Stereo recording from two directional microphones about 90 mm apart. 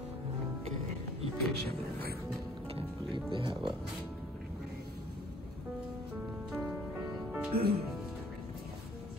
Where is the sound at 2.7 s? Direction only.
75° right (ahead or behind).